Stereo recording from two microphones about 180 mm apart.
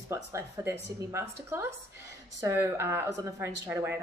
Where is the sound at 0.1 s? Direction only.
15° right (ahead or behind).